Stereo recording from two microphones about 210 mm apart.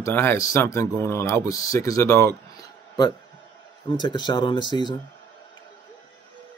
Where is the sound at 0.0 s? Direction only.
10° left (ahead or behind).